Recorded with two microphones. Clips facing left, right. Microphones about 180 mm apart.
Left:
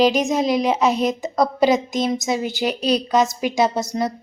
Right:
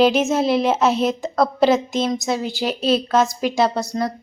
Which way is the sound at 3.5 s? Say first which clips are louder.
Even; 20° left (ahead or behind).